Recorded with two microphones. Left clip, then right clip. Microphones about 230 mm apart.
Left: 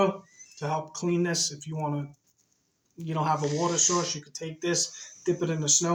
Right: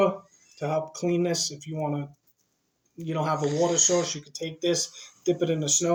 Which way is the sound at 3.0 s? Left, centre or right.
Centre.